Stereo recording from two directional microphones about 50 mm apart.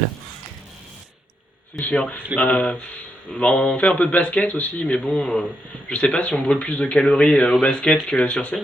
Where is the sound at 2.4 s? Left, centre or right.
Left.